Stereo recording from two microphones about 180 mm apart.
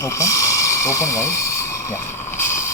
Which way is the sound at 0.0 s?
15° left (ahead or behind).